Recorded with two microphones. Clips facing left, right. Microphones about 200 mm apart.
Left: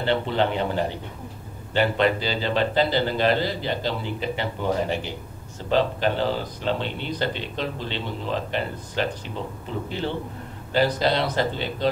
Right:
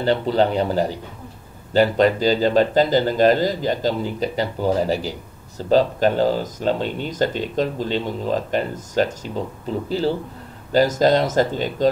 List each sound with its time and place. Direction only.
0.0 s speech: 40° right (ahead or behind)